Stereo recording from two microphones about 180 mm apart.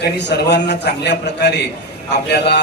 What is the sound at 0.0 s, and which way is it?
A man's voice, 65° left (ahead or behind).